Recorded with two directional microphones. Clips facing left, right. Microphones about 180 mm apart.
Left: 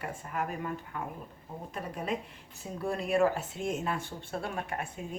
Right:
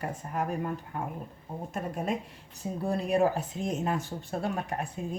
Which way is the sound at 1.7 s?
45° right (ahead or behind).